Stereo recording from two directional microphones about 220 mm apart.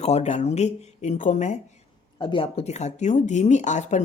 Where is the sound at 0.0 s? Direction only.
30° left (ahead or behind).